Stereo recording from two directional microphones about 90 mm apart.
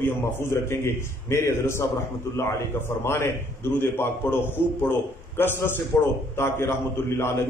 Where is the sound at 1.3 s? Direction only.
30° left (ahead or behind).